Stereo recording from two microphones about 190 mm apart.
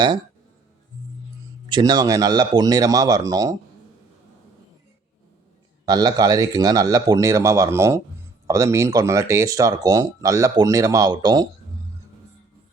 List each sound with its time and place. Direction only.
1.7 s a man's voice: 20° right (ahead or behind)
5.8 s a man's voice: 20° right (ahead or behind)